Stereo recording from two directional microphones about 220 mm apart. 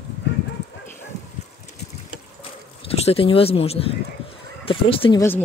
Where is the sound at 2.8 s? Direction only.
25° left (ahead or behind).